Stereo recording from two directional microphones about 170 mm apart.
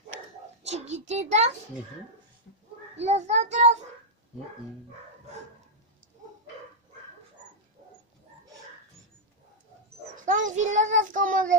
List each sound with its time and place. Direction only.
0.7 s a child's voice: 40° right (ahead or behind)
3.0 s a child's voice: 40° right (ahead or behind)
10.1 s child singing: 50° right (ahead or behind)